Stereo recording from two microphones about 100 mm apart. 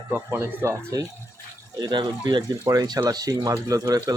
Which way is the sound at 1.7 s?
45° right (ahead or behind).